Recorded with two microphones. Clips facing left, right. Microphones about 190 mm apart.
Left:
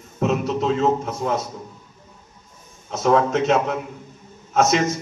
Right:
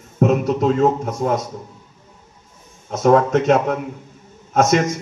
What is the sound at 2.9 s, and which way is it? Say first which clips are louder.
A man's voice: right 4 dB; 45° right (ahead or behind).